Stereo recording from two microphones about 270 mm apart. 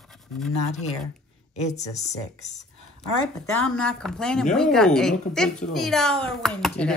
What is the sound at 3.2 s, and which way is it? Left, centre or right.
Speech, centre.